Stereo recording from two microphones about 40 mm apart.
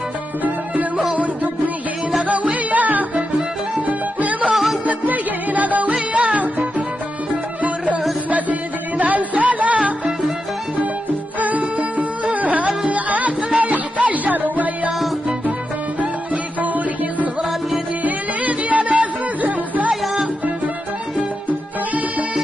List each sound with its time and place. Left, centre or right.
0.4 s music: right
11.3 s music: right
16.6 s music: right